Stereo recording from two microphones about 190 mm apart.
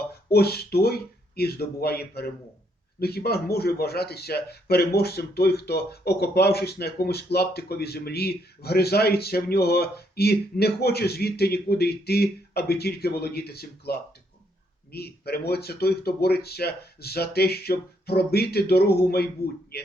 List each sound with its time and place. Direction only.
0.3 s a man's voice: 55° left (ahead or behind)